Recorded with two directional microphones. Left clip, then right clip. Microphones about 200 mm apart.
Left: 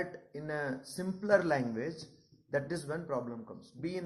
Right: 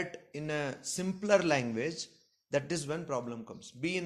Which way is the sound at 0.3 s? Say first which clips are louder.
Right 1 dB; 50° right (ahead or behind).